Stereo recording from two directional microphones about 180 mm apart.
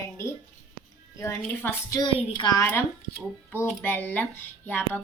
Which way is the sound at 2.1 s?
30° left (ahead or behind).